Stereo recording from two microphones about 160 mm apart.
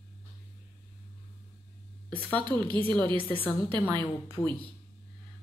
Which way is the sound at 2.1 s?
10° left (ahead or behind).